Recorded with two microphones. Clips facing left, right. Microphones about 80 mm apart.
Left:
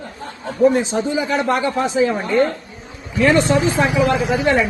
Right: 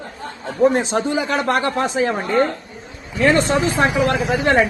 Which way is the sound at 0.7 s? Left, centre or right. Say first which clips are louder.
Even; right.